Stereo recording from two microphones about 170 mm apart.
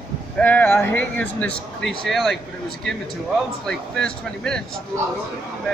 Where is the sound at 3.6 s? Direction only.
5° left (ahead or behind).